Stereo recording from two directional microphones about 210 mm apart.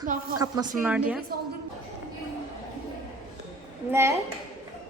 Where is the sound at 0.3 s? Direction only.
15° right (ahead or behind).